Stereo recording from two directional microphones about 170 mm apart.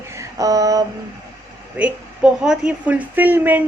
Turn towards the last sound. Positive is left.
turn(degrees=-10)  # may be behind; listen again after turning